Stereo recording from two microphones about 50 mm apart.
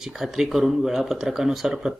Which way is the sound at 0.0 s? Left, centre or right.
Centre.